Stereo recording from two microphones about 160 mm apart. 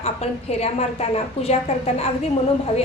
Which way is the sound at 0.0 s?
40° left (ahead or behind).